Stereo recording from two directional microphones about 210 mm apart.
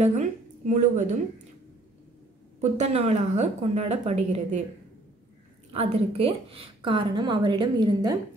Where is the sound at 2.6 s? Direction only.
30° right (ahead or behind).